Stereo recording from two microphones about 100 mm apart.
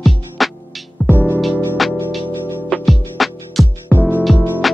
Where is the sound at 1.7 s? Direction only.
Centre (ahead or behind).